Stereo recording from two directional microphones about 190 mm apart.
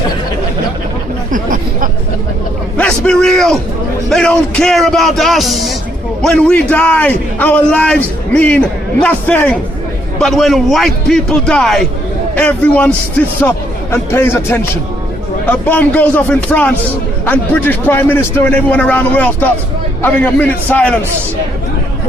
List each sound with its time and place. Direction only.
1.3 s chatter: 45° right (ahead or behind)
2.7 s a sound: 5° left (ahead or behind)
4.1 s a man's voice: 5° left (ahead or behind)
13.9 s a man's voice: 10° left (ahead or behind)